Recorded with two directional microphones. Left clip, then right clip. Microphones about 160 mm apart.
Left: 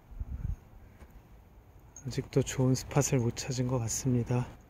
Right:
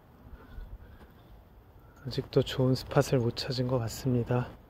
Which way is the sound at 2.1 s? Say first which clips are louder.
Right 3 dB; 25° left (ahead or behind).